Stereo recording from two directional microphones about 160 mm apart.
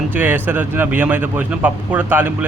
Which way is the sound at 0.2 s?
10° right (ahead or behind).